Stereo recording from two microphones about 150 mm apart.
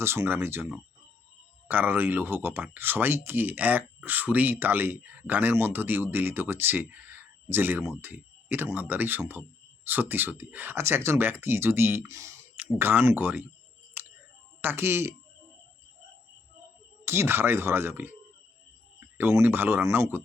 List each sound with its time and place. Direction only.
0.0 s speech: 15° right (ahead or behind)
14.0 s a sound: 10° right (ahead or behind)
14.6 s speech: 15° right (ahead or behind)
17.1 s speech: 15° right (ahead or behind)